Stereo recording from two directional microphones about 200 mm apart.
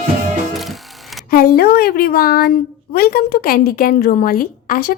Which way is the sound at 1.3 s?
50° left (ahead or behind).